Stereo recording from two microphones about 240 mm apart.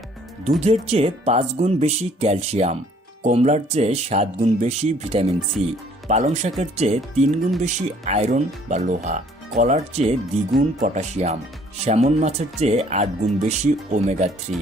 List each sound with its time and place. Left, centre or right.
0.6 s speech: right